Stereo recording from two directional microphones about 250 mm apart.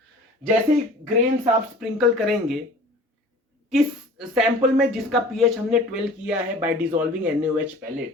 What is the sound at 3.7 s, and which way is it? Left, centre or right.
Speech, centre.